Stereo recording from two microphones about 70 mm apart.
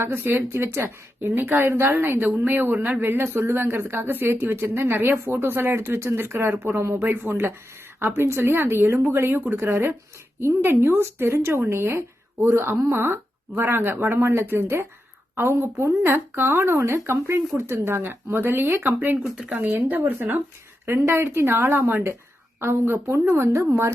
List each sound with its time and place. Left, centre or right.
0.0 s speech: right
3.0 s speech: right
19.4 s speech: centre
20.8 s speech: right